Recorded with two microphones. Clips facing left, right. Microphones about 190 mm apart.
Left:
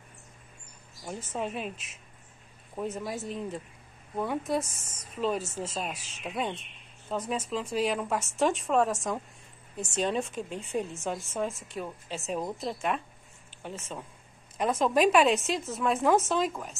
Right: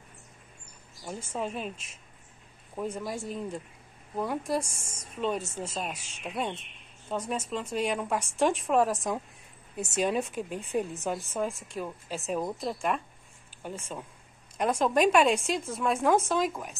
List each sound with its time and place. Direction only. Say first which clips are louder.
1.0 s speech: even; centre (ahead or behind)
2.7 s speech: even; centre (ahead or behind)
4.6 s a woman's voice: right 2 dB; 25° right (ahead or behind)
5.1 s speech: left 1 dB; centre (ahead or behind)